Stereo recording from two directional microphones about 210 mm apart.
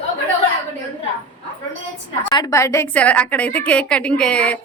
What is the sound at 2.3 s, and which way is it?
A woman's voice, 20° left (ahead or behind).